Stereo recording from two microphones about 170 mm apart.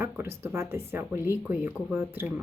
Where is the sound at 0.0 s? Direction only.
15° right (ahead or behind).